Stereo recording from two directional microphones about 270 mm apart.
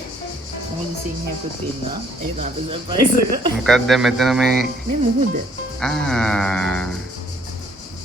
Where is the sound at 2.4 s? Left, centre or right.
Centre.